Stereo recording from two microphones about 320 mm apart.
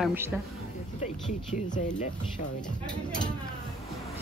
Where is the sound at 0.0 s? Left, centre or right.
Centre.